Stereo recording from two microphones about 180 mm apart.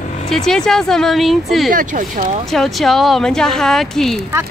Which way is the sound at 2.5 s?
Centre (ahead or behind).